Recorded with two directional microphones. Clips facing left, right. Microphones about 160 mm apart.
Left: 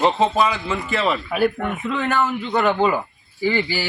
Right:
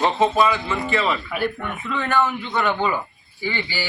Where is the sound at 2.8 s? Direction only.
35° left (ahead or behind).